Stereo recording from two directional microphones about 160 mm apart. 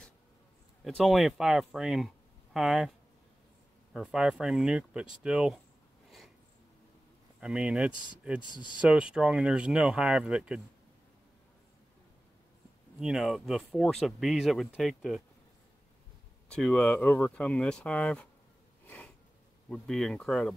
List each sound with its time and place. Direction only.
0.8 s speech: centre (ahead or behind)
3.9 s speech: 5° right (ahead or behind)
6.0 s a sound: centre (ahead or behind)
7.3 s speech: 5° right (ahead or behind)
8.5 s speech: 30° left (ahead or behind)
8.8 s speech: 5° right (ahead or behind)
13.0 s speech: 5° right (ahead or behind)
16.5 s speech: 5° left (ahead or behind)
18.9 s sniff: 10° left (ahead or behind)
19.7 s speech: centre (ahead or behind)